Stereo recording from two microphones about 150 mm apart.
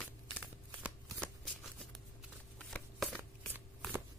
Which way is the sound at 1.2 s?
5° left (ahead or behind).